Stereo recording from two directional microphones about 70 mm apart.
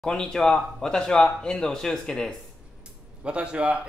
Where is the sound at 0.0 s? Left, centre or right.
Centre.